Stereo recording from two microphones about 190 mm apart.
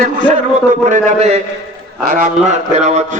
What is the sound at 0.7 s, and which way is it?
A man's voice, 40° right (ahead or behind).